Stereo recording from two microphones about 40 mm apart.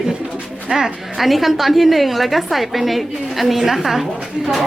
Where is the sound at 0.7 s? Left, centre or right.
Centre.